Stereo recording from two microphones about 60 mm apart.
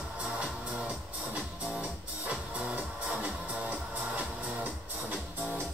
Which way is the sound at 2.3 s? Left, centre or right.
Right.